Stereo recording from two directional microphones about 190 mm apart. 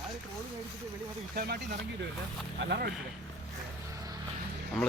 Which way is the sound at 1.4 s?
55° right (ahead or behind).